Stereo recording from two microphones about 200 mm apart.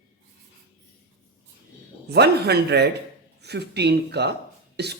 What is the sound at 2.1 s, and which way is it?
A man's voice, 55° right (ahead or behind).